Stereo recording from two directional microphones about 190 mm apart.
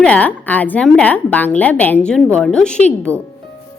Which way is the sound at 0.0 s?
5° left (ahead or behind).